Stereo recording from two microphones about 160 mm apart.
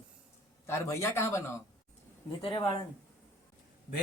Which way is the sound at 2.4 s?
30° left (ahead or behind).